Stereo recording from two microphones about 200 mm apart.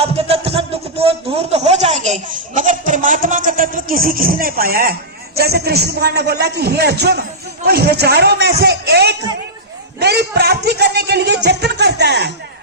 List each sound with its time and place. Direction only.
0.0 s music: 30° right (ahead or behind)
2.6 s a man's voice: 40° right (ahead or behind); by 12.3 s 55° right (ahead or behind)